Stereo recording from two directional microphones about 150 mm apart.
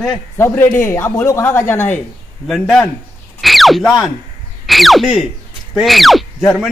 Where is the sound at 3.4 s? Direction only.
Centre (ahead or behind).